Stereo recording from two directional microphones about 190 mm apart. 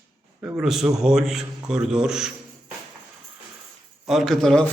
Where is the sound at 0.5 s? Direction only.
Centre (ahead or behind).